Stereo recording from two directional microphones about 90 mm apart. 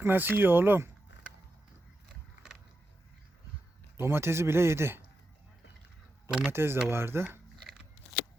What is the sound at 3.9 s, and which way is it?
Speech, 30° right (ahead or behind).